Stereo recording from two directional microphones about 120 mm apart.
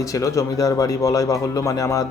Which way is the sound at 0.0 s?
25° left (ahead or behind).